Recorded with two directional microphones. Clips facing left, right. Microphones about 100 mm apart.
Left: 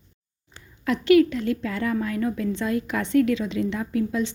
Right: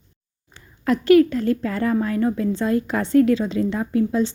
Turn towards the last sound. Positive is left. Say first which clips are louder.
# right 5 dB
turn(degrees=-35)  # may be behind; listen again after turning